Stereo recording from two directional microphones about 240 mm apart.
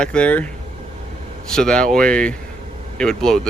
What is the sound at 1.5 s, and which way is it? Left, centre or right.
Speech, centre.